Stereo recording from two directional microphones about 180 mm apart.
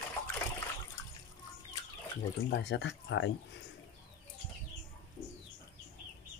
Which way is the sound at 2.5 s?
65° left (ahead or behind).